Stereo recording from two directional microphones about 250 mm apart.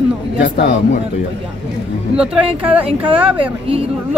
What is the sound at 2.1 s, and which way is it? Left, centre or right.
Speech, centre.